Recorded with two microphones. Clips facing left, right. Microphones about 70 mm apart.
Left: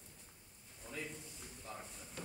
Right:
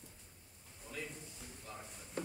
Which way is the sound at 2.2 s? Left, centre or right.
Right.